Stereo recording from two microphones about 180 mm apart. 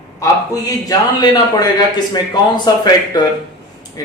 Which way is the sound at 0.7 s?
20° left (ahead or behind).